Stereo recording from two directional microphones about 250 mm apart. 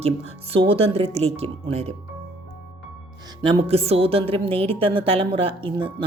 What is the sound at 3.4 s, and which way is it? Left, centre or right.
Speech, centre.